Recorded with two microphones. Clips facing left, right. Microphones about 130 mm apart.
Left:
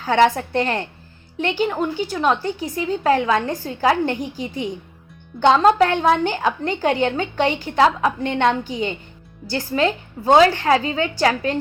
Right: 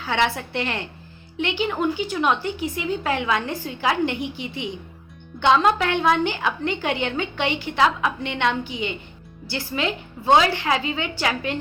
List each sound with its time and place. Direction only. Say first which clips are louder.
0.0 s a woman's voice: left 7 dB; 45° left (ahead or behind)